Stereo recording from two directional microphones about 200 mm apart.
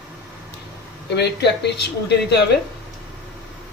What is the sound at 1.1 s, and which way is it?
Speech, 60° left (ahead or behind).